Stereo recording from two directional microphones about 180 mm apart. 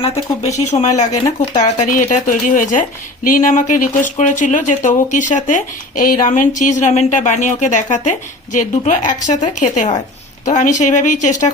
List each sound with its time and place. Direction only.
0.0 s speech: 40° left (ahead or behind)
1.1 s speech: 30° left (ahead or behind)
1.5 s speech: 40° left (ahead or behind)